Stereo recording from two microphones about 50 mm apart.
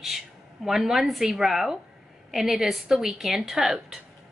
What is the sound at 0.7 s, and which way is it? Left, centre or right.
A woman's voice, centre.